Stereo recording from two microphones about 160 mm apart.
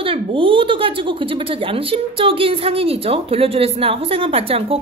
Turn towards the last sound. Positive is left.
turn(degrees=-35)  # may be behind; listen again after turning